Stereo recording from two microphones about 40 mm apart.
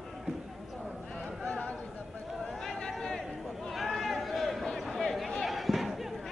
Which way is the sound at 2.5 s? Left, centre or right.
Centre.